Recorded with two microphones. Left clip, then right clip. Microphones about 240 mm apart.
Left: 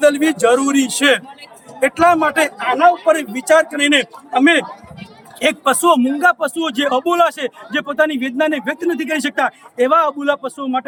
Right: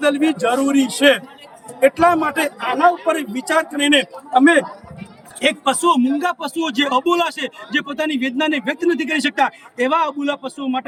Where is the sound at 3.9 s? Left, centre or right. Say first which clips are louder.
Even; centre.